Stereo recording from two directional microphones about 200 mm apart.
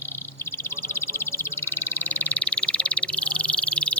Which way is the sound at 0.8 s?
10° left (ahead or behind).